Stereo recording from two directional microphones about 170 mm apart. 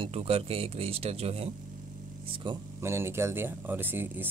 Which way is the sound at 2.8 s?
15° right (ahead or behind).